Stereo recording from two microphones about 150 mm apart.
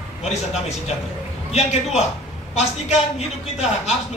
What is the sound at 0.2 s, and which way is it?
A man's voice, 45° left (ahead or behind).